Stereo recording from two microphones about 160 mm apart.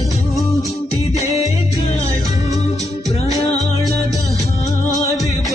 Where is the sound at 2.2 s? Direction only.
20° right (ahead or behind).